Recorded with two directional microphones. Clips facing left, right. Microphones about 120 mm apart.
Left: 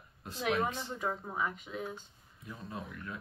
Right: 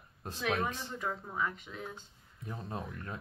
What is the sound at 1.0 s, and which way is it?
Speech, 20° left (ahead or behind).